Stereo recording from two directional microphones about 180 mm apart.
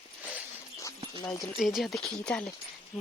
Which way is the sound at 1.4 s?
Centre (ahead or behind).